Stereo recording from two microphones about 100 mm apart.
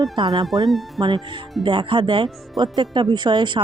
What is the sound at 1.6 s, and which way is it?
Speech, 55° right (ahead or behind).